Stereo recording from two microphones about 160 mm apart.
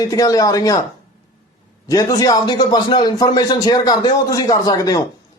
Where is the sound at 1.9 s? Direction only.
20° left (ahead or behind).